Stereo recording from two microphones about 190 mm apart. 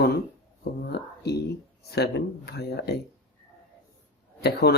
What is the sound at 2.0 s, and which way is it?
Speech, 60° left (ahead or behind).